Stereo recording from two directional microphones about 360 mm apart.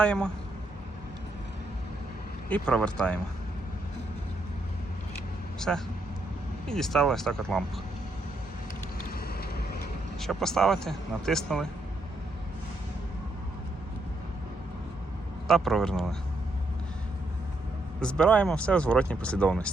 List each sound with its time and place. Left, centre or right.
0.0 s speech: centre
2.5 s speech: centre
5.5 s a man's voice: centre
9.2 s vehicle: left
10.2 s speech: centre
15.4 s speech: centre
18.0 s speech: centre